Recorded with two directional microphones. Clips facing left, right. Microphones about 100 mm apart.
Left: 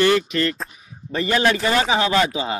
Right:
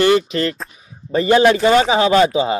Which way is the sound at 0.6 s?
Centre (ahead or behind).